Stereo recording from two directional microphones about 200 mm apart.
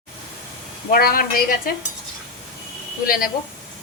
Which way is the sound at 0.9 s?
45° left (ahead or behind).